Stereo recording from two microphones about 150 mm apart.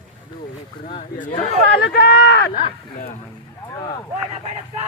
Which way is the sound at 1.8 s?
90° left.